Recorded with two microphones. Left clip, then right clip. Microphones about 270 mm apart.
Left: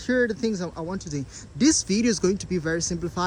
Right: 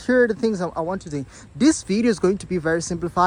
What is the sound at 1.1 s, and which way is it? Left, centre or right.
Speech, right.